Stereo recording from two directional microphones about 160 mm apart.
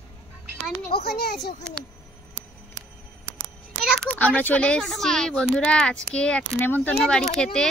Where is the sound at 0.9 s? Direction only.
80° left.